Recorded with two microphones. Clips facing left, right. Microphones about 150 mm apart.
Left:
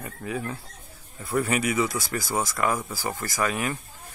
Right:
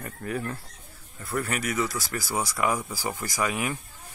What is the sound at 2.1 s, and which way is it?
Speech, 10° right (ahead or behind).